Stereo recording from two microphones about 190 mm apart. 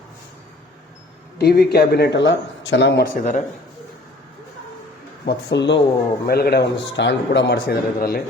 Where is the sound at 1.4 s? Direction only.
55° left (ahead or behind).